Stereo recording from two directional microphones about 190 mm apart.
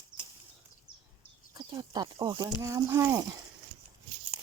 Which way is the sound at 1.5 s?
25° right (ahead or behind).